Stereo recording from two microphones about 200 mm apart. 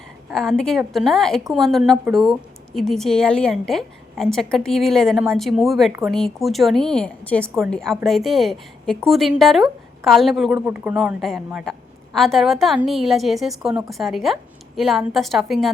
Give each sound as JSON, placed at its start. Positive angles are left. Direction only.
{"t": 0.3, "sound": "a woman's voice", "side_deg": 0}